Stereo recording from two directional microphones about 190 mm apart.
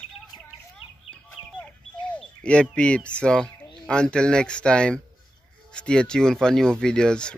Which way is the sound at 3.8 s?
5° left (ahead or behind).